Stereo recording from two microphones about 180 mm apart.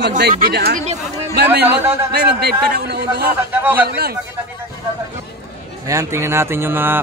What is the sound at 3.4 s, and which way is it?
Speech, 10° right (ahead or behind).